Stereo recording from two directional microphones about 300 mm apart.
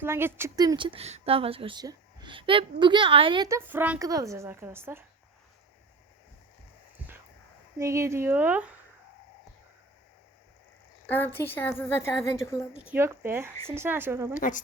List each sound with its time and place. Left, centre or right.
0.0 s a woman's voice: centre
7.8 s a woman's voice: centre
11.1 s a woman's voice: centre
12.9 s a woman's voice: centre
14.3 s speech: left